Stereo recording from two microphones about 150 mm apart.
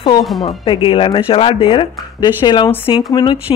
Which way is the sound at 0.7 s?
35° left (ahead or behind).